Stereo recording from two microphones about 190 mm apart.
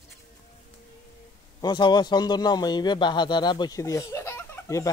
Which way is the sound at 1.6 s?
25° left (ahead or behind).